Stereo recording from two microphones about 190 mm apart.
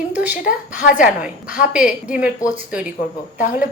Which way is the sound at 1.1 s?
5° right (ahead or behind).